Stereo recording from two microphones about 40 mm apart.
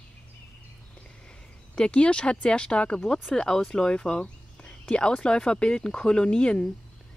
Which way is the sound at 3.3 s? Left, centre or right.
Centre.